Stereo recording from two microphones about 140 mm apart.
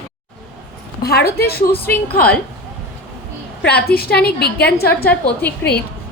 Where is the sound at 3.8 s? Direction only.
90° left.